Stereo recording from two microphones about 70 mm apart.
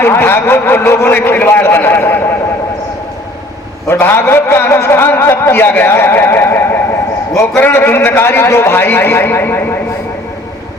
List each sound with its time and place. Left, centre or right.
0.0 s speech: left
3.8 s speech: left